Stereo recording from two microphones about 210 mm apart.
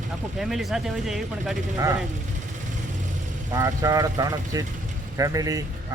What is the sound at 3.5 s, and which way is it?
Speech, 15° right (ahead or behind).